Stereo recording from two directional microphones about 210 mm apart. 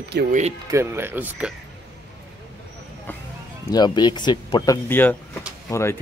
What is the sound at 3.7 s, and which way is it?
Speech, 20° left (ahead or behind).